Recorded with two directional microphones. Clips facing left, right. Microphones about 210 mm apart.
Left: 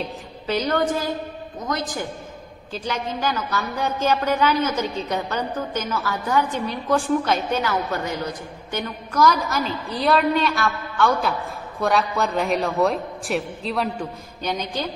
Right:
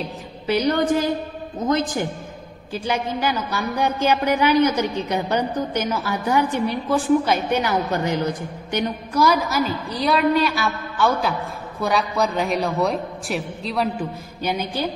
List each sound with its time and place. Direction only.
0.5 s a woman's voice: 15° right (ahead or behind)
2.7 s a woman's voice: 10° right (ahead or behind)